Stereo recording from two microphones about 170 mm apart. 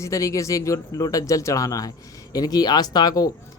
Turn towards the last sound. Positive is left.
turn(degrees=20)  # may be behind; listen again after turning